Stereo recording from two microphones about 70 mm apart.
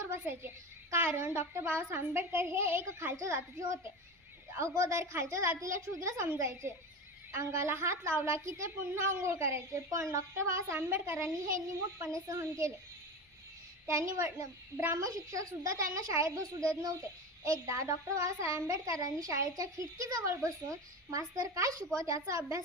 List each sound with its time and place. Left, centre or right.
0.0 s a woman's voice: right
13.8 s a woman's voice: right
15.0 s a woman's voice: right
17.7 s a woman's voice: right